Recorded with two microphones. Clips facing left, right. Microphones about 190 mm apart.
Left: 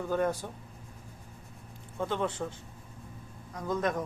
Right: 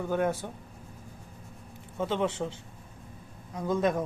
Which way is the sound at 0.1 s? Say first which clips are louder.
Right 1 dB; 10° right (ahead or behind).